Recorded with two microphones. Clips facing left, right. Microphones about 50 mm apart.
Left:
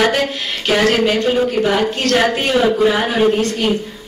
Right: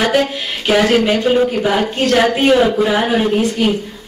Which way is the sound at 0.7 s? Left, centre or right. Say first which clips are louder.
Right 2 dB; centre.